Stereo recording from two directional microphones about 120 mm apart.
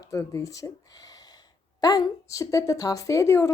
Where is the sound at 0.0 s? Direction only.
30° left (ahead or behind).